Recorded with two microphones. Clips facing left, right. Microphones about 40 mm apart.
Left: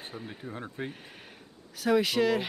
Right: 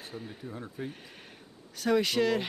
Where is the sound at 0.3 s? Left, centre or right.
Left.